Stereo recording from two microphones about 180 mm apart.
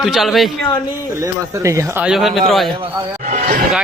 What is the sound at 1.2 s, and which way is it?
Speech, 15° right (ahead or behind).